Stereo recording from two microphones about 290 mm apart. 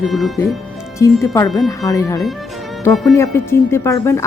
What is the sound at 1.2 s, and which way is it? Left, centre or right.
Speech, centre.